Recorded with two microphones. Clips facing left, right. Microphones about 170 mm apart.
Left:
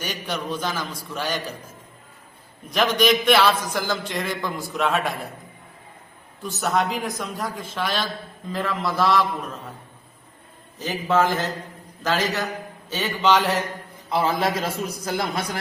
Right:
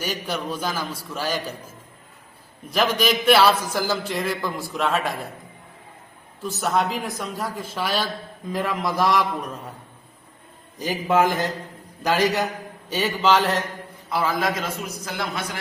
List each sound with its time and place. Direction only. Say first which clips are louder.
0.0 s a man's voice: right 1 dB; 5° right (ahead or behind)
6.4 s a man's voice: even; centre (ahead or behind); by 9.2 s 15° right (ahead or behind)
10.8 s a man's voice: right 1 dB; 15° right (ahead or behind)
14.1 s a man's voice: left 1 dB; 25° left (ahead or behind)